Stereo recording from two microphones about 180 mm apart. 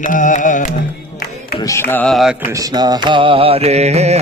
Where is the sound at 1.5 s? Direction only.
15° left (ahead or behind); by 2.3 s centre (ahead or behind).